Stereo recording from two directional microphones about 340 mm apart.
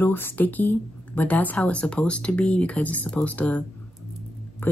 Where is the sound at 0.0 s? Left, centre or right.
Centre.